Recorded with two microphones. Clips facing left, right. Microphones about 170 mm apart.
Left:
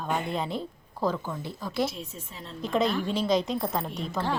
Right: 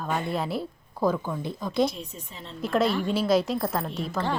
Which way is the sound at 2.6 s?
5° right (ahead or behind).